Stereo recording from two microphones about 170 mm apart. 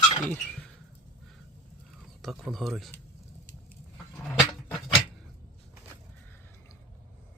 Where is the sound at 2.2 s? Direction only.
Centre (ahead or behind).